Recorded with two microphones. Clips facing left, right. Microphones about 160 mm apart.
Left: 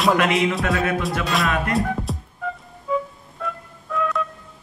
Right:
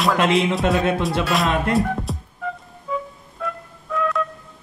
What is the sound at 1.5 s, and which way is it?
Music, 25° right (ahead or behind).